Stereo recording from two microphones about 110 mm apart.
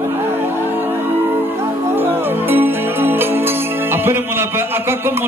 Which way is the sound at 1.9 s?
20° right (ahead or behind).